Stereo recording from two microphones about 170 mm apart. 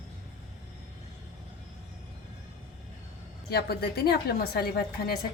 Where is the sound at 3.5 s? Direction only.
65° left (ahead or behind).